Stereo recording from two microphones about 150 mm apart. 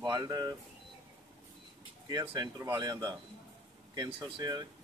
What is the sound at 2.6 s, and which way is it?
Speech, 20° right (ahead or behind).